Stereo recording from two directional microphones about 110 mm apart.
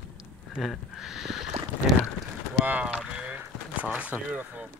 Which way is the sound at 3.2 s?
10° right (ahead or behind).